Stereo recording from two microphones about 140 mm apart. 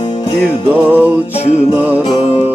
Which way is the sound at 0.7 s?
15° right (ahead or behind).